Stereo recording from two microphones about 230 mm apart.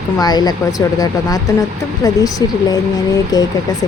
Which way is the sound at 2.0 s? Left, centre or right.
Centre.